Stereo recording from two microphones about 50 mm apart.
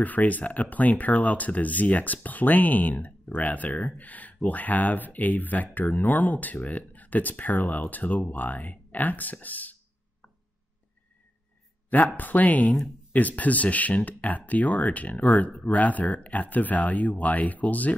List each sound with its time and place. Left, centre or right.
0.0 s speech: left
12.2 s speech: left